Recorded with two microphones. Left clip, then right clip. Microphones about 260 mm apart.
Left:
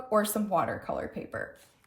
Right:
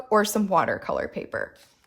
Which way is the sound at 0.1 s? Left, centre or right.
Right.